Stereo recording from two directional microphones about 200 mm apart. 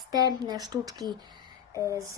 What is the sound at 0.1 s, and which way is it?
Speech, 20° right (ahead or behind).